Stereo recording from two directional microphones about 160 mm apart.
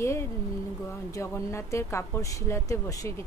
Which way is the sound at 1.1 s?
15° left (ahead or behind).